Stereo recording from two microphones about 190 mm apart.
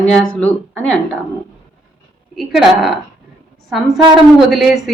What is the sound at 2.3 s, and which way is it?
Speech, centre (ahead or behind).